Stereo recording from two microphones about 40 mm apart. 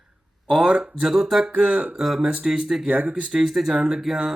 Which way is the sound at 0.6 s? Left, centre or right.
Right.